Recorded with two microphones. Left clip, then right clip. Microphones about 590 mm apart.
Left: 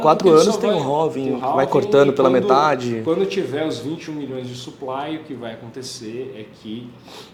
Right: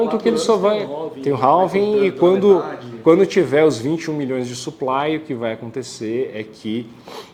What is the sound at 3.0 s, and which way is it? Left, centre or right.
Speech, right.